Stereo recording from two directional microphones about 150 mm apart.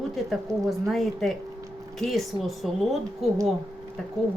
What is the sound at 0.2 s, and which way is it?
A woman's voice, centre (ahead or behind).